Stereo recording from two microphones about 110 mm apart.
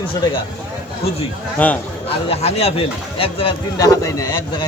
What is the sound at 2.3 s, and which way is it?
Speech, 70° left (ahead or behind).